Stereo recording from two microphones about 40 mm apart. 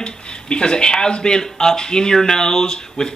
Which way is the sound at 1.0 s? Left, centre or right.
Centre.